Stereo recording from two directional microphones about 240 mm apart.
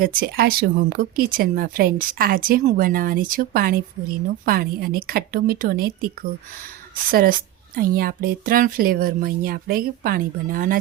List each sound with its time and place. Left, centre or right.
0.0 s speech: right